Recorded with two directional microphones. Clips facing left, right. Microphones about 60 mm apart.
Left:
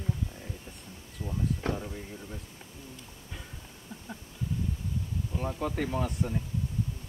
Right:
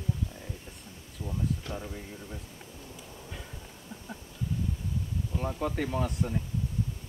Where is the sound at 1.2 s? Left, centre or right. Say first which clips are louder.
Even; centre.